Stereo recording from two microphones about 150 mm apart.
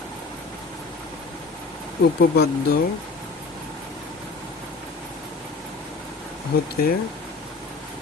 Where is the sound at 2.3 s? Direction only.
90° left.